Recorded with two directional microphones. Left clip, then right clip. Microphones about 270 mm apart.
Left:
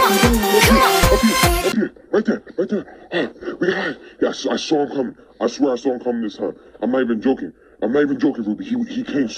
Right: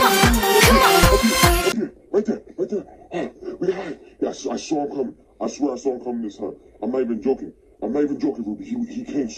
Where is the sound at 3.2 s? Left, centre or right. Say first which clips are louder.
Left 4 dB; left.